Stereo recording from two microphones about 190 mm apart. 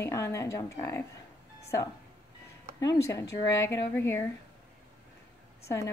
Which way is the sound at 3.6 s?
15° left (ahead or behind).